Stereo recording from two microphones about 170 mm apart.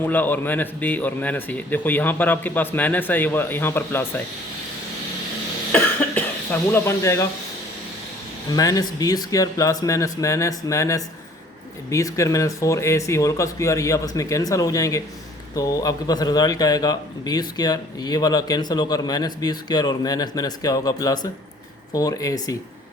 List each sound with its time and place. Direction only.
0.0 s speech: 10° left (ahead or behind)
5.7 s cough: 10° left (ahead or behind)
8.5 s a man's voice: 20° left (ahead or behind)